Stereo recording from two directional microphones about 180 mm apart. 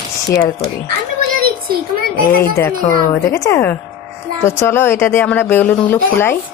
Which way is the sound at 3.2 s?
15° left (ahead or behind).